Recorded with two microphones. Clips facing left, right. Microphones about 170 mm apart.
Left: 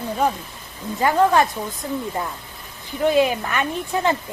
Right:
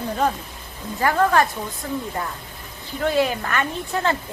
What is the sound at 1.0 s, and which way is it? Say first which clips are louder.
Speech: left 2 dB; 15° left (ahead or behind).